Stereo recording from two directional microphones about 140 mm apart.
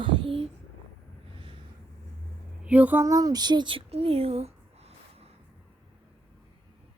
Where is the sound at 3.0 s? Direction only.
25° right (ahead or behind); by 5.3 s 45° right (ahead or behind).